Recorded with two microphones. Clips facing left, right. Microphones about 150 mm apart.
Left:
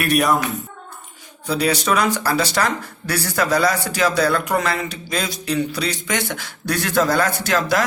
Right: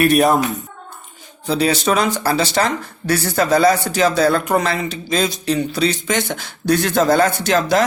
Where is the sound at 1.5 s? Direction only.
25° right (ahead or behind).